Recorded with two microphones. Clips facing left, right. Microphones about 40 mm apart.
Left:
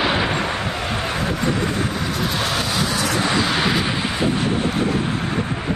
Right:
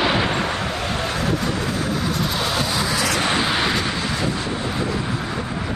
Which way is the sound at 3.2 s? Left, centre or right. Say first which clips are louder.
Left 1 dB; centre.